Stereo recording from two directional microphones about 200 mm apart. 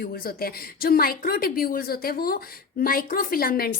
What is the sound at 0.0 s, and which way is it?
A woman's voice, 50° left (ahead or behind).